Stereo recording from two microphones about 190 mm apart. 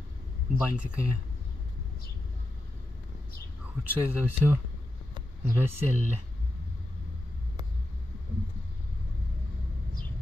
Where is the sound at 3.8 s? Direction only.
10° right (ahead or behind).